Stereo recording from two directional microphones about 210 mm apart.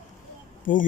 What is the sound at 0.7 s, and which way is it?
Speech, 40° left (ahead or behind).